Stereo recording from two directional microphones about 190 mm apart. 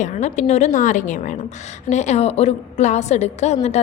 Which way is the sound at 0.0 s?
40° left (ahead or behind).